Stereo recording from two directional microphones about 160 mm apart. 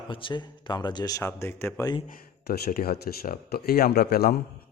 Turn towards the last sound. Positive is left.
turn(degrees=75)  # may be behind; listen again after turning